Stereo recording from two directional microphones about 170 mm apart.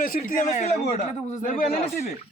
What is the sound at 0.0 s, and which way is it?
A man's voice, 55° left (ahead or behind).